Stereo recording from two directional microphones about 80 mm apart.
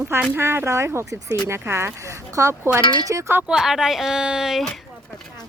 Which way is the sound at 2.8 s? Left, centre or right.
Left.